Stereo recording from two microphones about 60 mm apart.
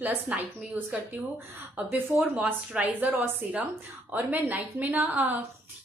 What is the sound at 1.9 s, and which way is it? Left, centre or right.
A woman's voice, right.